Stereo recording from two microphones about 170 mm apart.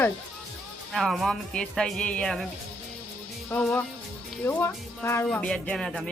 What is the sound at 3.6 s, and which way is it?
Speech, 5° left (ahead or behind).